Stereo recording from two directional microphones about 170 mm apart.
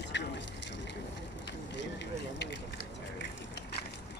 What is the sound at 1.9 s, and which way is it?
Vehicle, 85° left.